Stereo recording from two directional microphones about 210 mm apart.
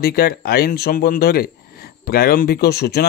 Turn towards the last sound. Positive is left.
turn(degrees=50)  # may be behind; listen again after turning